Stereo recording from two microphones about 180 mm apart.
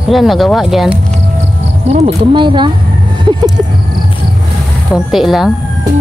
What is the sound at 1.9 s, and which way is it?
Speech, 35° right (ahead or behind).